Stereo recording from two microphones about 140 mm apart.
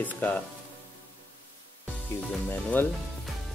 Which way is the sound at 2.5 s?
15° left (ahead or behind).